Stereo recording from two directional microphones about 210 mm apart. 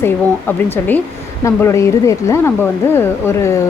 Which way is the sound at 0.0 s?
10° left (ahead or behind).